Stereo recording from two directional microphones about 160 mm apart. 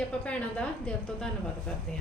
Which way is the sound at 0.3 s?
5° left (ahead or behind).